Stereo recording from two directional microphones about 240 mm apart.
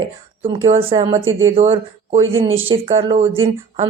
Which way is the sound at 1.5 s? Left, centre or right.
Right.